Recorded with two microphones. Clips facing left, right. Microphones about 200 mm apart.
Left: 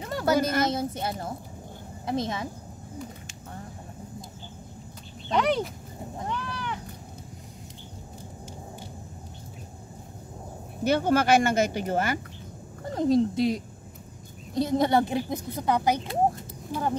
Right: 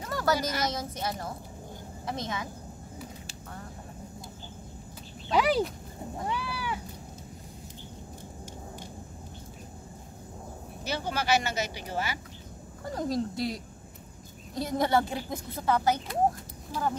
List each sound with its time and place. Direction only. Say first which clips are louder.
0.0 s a sound: left 2 dB; 25° left (ahead or behind)
0.4 s speech: left 6 dB; 55° left (ahead or behind)
0.7 s a woman's voice: left 4 dB; 25° left (ahead or behind)
5.3 s speech: even; 5° right (ahead or behind)
6.2 s cat: even; 10° right (ahead or behind)
10.8 s speech: left 10 dB; 55° left (ahead or behind)
12.9 s a woman's voice: left 8 dB; 25° left (ahead or behind)
14.6 s a woman's voice: left 4 dB; 20° left (ahead or behind)